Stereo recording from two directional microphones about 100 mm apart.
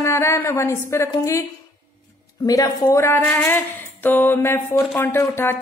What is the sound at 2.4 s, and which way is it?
Speech, 35° left (ahead or behind).